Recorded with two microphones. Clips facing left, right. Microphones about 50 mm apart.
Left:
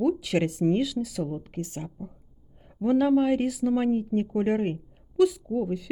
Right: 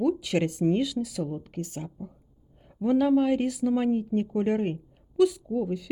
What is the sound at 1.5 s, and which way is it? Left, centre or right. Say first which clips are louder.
Speech: left 1 dB; left.